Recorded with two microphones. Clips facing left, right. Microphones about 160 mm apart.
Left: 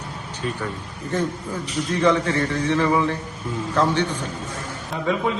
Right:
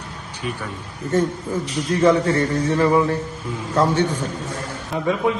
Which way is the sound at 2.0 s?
40° right (ahead or behind).